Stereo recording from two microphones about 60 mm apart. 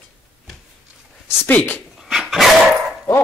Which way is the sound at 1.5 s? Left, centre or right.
Left.